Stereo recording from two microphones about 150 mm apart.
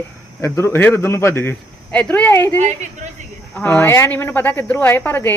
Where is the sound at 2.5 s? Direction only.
55° right (ahead or behind).